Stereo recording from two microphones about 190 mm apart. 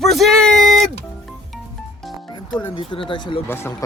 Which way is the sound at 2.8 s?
25° left (ahead or behind).